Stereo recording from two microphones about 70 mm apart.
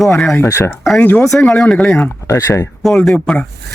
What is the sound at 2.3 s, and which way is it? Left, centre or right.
Speech, left.